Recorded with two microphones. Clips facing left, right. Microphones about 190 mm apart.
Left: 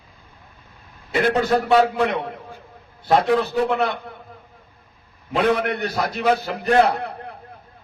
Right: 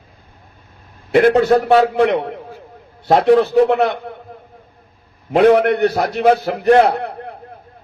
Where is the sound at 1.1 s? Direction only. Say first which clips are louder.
Right 8 dB; 55° right (ahead or behind).